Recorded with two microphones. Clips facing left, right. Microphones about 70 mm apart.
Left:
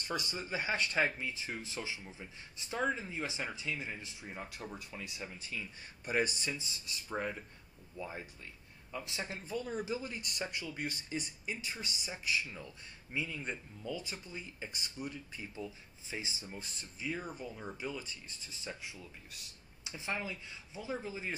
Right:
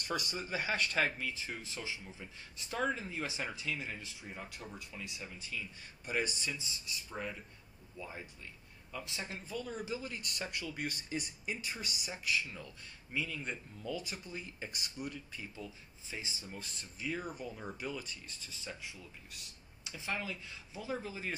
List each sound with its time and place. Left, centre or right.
0.1 s speech: centre
0.5 s speech: centre
4.7 s speech: left
8.0 s speech: left
10.7 s speech: centre
12.1 s speech: centre
14.0 s speech: centre
14.4 s speech: centre
15.3 s speech: centre
16.4 s speech: centre
17.0 s speech: centre
18.4 s speech: centre